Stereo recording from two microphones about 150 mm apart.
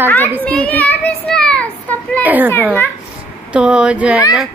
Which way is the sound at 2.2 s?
10° right (ahead or behind).